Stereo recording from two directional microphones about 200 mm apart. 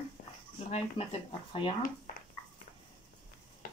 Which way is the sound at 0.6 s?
35° left (ahead or behind).